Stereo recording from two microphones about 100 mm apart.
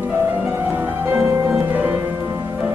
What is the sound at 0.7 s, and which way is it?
Music, 25° right (ahead or behind).